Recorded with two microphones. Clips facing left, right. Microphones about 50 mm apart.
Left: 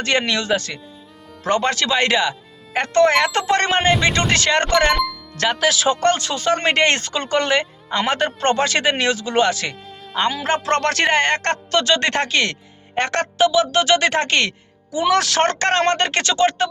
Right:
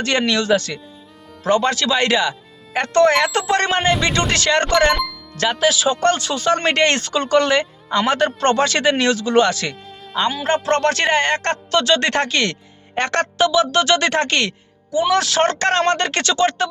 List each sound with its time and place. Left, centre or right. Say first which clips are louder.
0.0 s speech: right 1 dB; left
1.5 s speech: right 2 dB; left
3.3 s speech: even; left
5.4 s speech: right 1 dB; left
6.0 s speech: right 1 dB; left
6.5 s speech: even; left
10.2 s speech: right 1 dB; left
11.9 s speech: right 1 dB; left
13.0 s speech: even; centre
14.9 s speech: even; left